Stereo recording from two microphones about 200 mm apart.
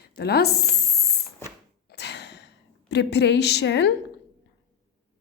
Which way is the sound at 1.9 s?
60° left (ahead or behind).